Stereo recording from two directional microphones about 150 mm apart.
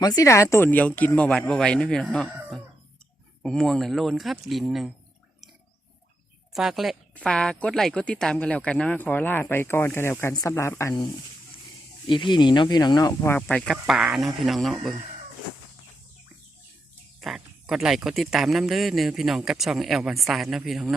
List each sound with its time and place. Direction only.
0.0 s speech: 25° left (ahead or behind); by 4.9 s centre (ahead or behind)
6.5 s speech: centre (ahead or behind); by 10.9 s 20° left (ahead or behind)
12.0 s speech: 30° left (ahead or behind)
13.5 s speech: 5° left (ahead or behind)
17.2 s speech: centre (ahead or behind)